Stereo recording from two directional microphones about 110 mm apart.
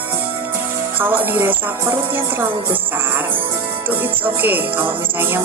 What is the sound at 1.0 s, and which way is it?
Speech, 20° right (ahead or behind).